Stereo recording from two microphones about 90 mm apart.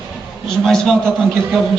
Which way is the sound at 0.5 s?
5° left (ahead or behind).